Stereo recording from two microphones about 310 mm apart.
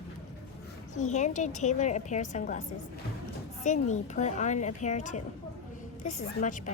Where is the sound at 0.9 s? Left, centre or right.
Left.